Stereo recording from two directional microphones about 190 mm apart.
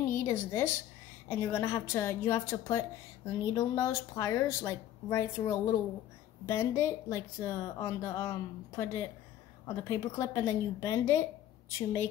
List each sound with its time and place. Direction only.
0.0 s a woman's voice: 15° left (ahead or behind)